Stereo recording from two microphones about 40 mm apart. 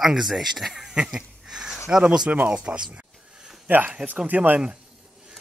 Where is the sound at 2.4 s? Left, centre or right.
Right.